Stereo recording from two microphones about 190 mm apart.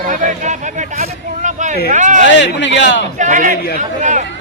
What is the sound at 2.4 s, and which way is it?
Speech, 70° left (ahead or behind).